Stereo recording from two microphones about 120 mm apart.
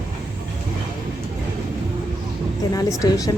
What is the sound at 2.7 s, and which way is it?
Speech, 30° left (ahead or behind).